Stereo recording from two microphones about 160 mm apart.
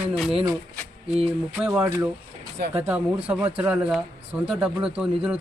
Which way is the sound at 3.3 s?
10° right (ahead or behind).